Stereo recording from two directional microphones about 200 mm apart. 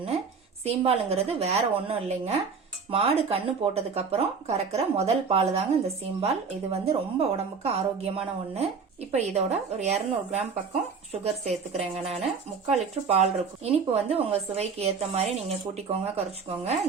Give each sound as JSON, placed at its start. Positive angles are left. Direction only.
{"t": 0.6, "sound": "speech", "side_deg": -30}
{"t": 11.8, "sound": "speech", "side_deg": -30}